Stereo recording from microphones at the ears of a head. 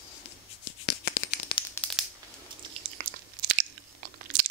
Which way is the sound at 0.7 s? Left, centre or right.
Left.